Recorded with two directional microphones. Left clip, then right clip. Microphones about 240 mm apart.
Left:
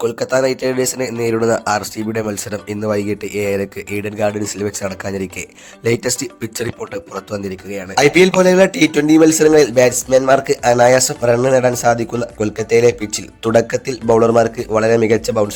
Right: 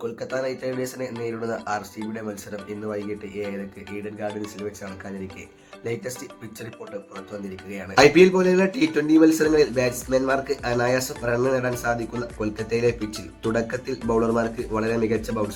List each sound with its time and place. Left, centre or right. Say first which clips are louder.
0.0 s speech: left 12 dB; left
7.9 s speech: left 4 dB; left